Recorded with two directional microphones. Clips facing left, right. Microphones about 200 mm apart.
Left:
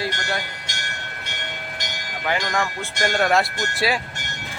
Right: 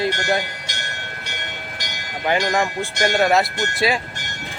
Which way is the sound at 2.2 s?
20° right (ahead or behind).